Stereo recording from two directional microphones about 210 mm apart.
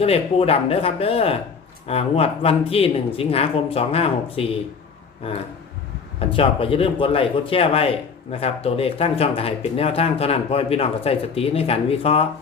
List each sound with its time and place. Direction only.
0.0 s speech: 30° left (ahead or behind)